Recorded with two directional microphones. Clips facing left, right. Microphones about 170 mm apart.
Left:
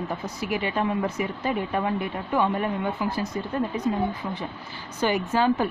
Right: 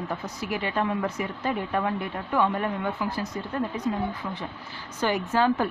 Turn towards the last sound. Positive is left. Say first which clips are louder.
# left 1 dB
turn(degrees=10)  # may be behind; listen again after turning